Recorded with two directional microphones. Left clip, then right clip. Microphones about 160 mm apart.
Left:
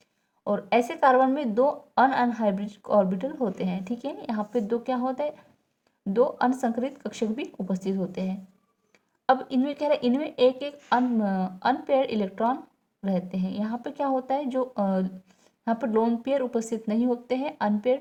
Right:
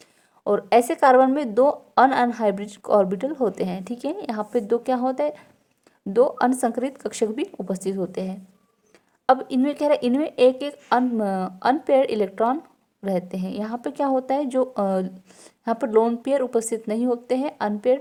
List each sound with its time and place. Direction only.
0.4 s a woman's voice: 45° right (ahead or behind)